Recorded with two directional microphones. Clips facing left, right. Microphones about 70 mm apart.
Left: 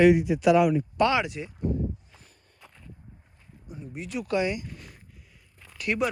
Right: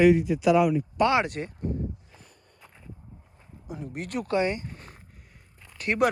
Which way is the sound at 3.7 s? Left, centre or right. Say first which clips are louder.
Right 2 dB; right.